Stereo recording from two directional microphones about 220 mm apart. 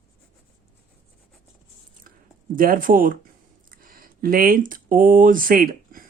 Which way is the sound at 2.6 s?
40° right (ahead or behind).